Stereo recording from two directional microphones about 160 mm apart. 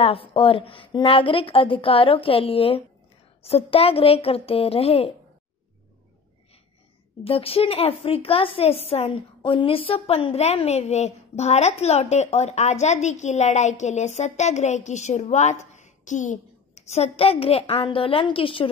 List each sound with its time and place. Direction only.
0.0 s a woman's voice: 35° left (ahead or behind)
7.2 s a woman's voice: 35° left (ahead or behind)